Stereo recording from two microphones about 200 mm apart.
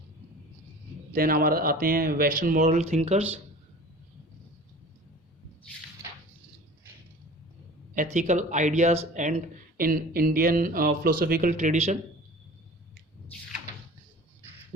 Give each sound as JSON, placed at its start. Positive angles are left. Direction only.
{"t": 1.1, "sound": "speech", "side_deg": -45}
{"t": 7.9, "sound": "speech", "side_deg": -35}